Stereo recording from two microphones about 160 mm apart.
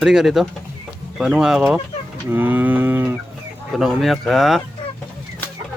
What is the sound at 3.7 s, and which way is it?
Speech, 5° right (ahead or behind).